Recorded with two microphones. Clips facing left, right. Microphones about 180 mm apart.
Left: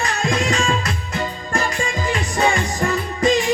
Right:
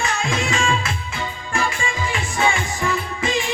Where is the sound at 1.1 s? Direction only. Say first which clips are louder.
Left 5 dB; 40° left (ahead or behind).